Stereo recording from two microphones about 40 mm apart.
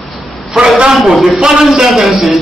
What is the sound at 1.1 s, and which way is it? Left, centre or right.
Speech, centre.